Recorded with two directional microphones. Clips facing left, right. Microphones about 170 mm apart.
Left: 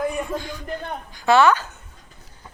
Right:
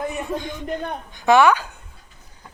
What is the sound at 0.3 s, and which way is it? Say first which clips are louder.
A woman's voice: right 2 dB; 20° right (ahead or behind).